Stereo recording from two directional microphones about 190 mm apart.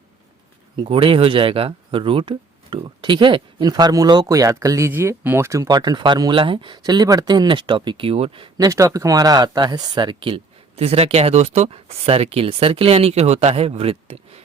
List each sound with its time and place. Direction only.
0.8 s speech: 30° right (ahead or behind)